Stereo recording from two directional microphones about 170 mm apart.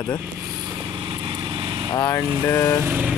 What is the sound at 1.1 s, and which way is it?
Vehicle, 30° right (ahead or behind).